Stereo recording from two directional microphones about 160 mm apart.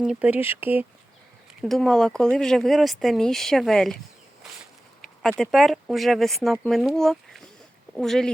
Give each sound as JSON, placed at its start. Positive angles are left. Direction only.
{"t": 0.0, "sound": "speech", "side_deg": -5}
{"t": 1.6, "sound": "speech", "side_deg": 0}
{"t": 5.4, "sound": "speech", "side_deg": 0}